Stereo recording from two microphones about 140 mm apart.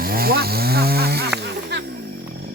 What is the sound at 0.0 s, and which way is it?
Chainsaw, 90° right.